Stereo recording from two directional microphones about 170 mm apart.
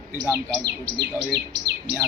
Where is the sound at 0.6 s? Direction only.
75° right (ahead or behind).